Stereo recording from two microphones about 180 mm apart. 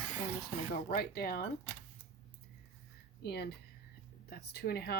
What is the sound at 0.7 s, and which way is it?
Speech, 60° left (ahead or behind).